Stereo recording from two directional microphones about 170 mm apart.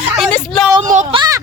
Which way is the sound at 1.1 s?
25° right (ahead or behind).